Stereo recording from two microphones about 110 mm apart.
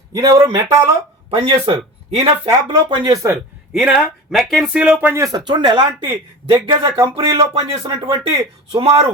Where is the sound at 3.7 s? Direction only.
10° right (ahead or behind).